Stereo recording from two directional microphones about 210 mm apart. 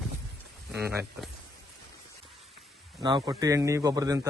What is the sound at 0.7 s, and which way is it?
Speech, centre (ahead or behind).